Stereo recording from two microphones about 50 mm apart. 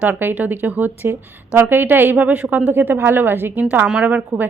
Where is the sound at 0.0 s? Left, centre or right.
Right.